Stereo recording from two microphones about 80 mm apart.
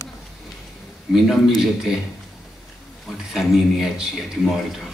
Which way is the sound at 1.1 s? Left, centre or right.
Centre.